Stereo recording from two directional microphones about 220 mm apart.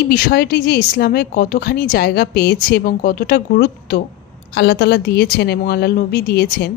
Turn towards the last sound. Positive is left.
turn(degrees=45)  # may be behind; listen again after turning